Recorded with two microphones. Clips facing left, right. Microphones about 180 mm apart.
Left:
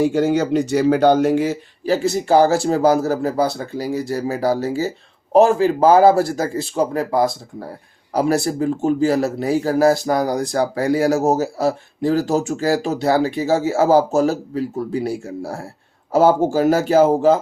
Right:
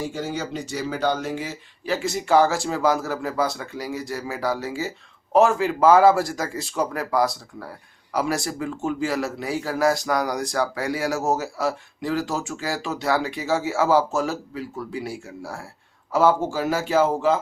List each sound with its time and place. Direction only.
0.0 s speech: 65° left (ahead or behind)
1.8 s speech: 35° left (ahead or behind)